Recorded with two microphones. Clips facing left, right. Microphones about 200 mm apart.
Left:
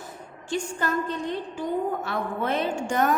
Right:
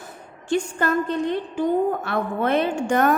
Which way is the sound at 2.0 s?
65° right (ahead or behind).